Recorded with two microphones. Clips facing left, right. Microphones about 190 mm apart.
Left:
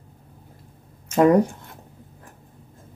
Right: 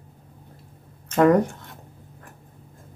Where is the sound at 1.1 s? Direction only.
15° left (ahead or behind).